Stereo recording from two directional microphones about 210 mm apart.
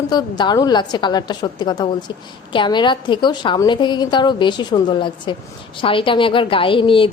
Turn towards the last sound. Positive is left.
turn(degrees=25)  # may be behind; listen again after turning